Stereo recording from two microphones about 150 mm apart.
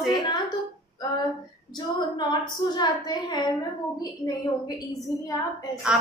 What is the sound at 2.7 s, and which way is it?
Speech, 30° left (ahead or behind).